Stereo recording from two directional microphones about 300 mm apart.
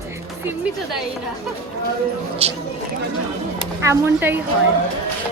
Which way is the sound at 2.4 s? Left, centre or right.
Centre.